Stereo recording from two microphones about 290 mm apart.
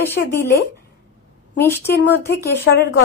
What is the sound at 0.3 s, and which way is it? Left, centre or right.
Speech, centre.